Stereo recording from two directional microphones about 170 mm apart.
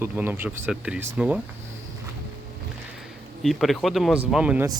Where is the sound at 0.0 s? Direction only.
15° right (ahead or behind).